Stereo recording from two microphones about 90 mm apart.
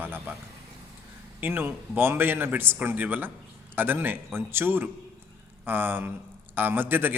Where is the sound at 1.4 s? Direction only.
20° right (ahead or behind).